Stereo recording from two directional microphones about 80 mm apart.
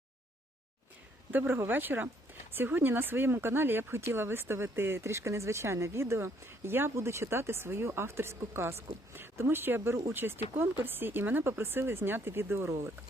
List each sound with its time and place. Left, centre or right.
1.3 s speech: right